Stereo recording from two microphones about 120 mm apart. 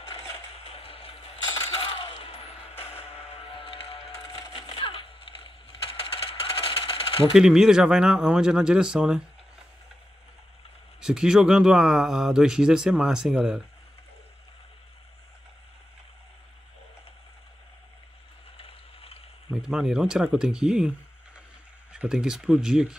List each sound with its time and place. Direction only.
0.7 s coin: 50° left (ahead or behind)
2.8 s music: 55° left (ahead or behind)
4.6 s a sound: 45° left (ahead or behind)
7.3 s speech: 5° right (ahead or behind)
11.0 s speech: 5° right (ahead or behind)
18.6 s a sound: 50° left (ahead or behind)
19.5 s speech: 5° right (ahead or behind)
21.9 s speech: 5° right (ahead or behind)